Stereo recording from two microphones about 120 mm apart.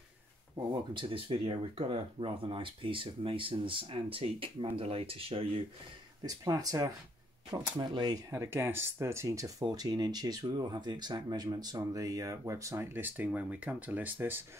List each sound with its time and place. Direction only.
0.6 s speech: 30° right (ahead or behind)
0.9 s speech: 45° right (ahead or behind)
6.2 s speech: 30° right (ahead or behind)
8.3 s speech: 20° right (ahead or behind)